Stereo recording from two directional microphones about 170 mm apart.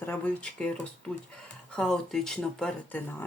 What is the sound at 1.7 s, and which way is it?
Speech, 5° left (ahead or behind).